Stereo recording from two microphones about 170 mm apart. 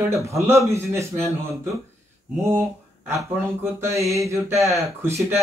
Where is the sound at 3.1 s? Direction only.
15° right (ahead or behind).